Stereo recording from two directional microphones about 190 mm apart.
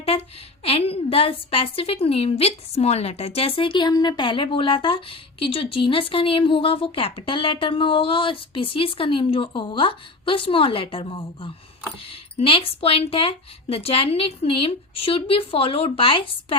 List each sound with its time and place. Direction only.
0.0 s a woman's voice: 30° left (ahead or behind)